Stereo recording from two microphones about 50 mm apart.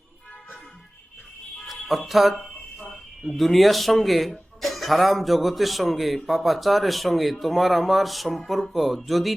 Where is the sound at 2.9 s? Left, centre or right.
Centre.